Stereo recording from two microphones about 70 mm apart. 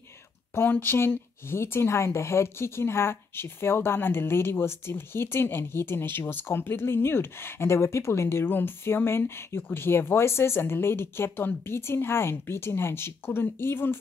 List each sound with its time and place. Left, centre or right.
0.6 s speech: left